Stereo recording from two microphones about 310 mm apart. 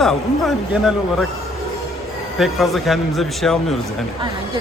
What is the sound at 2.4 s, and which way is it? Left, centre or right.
A man's voice, centre.